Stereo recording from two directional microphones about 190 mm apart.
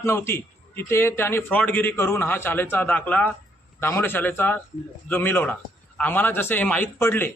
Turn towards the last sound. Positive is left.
turn(degrees=10)  # may be behind; listen again after turning